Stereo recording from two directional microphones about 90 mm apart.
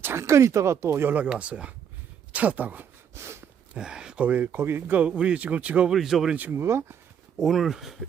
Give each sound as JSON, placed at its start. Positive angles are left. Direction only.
{"t": 0.0, "sound": "speech", "side_deg": -30}
{"t": 2.3, "sound": "a sound", "side_deg": -15}
{"t": 3.8, "sound": "speech", "side_deg": -10}
{"t": 5.9, "sound": "speech", "side_deg": -5}
{"t": 6.3, "sound": "speech", "side_deg": -20}
{"t": 6.6, "sound": "speech", "side_deg": -30}
{"t": 7.3, "sound": "speech", "side_deg": 0}